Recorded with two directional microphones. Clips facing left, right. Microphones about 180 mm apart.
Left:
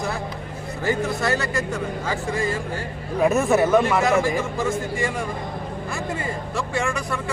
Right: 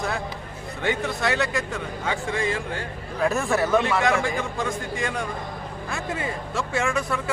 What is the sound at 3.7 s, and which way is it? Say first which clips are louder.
A man's voice: left 3 dB; centre (ahead or behind).